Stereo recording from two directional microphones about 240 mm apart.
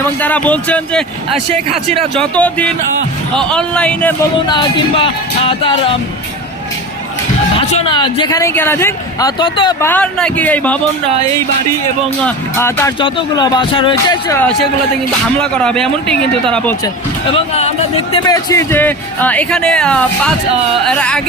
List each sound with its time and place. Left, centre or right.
0.2 s speech: centre
4.4 s music: centre
7.7 s speech: left
9.9 s speech: centre
12.2 s speech: centre
15.4 s speech: centre
17.3 s music: left
18.3 s speech: centre